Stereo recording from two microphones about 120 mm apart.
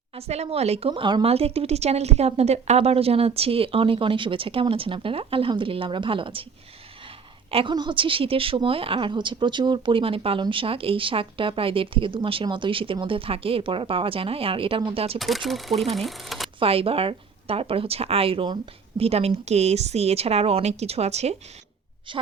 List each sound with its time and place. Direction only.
0.2 s speech: 60° right (ahead or behind)
7.5 s speech: 40° right (ahead or behind)
15.2 s speech: centre (ahead or behind)
16.6 s speech: 50° right (ahead or behind)
18.9 s a woman's voice: 55° right (ahead or behind)
22.1 s speech: 45° right (ahead or behind)